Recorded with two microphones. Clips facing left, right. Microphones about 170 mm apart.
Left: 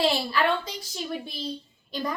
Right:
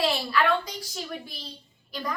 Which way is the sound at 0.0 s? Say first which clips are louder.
Left 1 dB; 25° left (ahead or behind).